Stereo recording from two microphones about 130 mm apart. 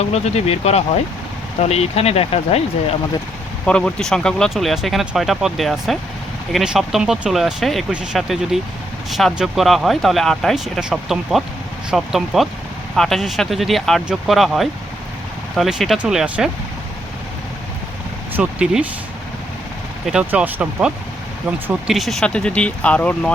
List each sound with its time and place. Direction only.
0.0 s speech: 55° left (ahead or behind)
3.7 s speech: 5° left (ahead or behind)
18.3 s speech: 10° right (ahead or behind)
20.1 s speech: 10° right (ahead or behind); by 23.3 s 10° left (ahead or behind)